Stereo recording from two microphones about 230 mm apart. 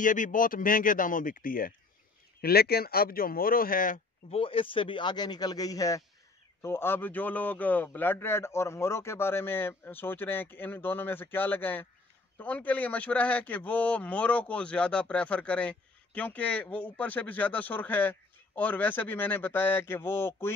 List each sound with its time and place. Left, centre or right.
0.0 s speech: left
4.4 s a man's voice: left